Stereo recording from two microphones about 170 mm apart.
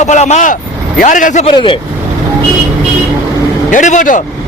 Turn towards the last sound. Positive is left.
turn(degrees=50)  # may be behind; listen again after turning